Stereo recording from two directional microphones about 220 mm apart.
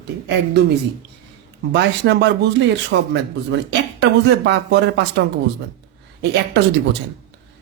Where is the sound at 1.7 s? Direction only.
55° right (ahead or behind).